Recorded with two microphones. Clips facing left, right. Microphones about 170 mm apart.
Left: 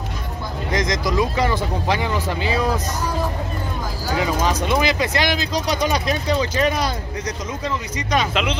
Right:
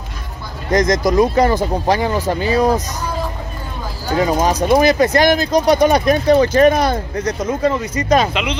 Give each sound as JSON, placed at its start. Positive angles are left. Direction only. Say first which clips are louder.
{"t": 0.7, "sound": "speech", "louder": "right 8 dB", "side_deg": -45}
{"t": 4.4, "sound": "speech", "louder": "right 9 dB", "side_deg": -45}